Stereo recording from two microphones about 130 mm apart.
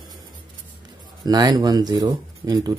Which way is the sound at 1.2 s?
30° right (ahead or behind).